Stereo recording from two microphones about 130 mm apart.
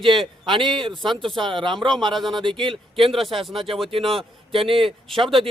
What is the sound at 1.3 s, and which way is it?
Speech, 40° right (ahead or behind).